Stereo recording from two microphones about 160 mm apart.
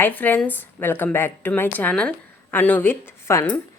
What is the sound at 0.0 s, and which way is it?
A woman's voice, 10° left (ahead or behind).